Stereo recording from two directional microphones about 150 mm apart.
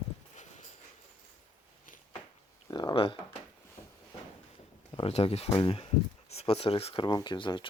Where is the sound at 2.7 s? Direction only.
30° left (ahead or behind).